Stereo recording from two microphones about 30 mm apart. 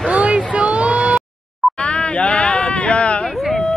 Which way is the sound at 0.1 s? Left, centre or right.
Right.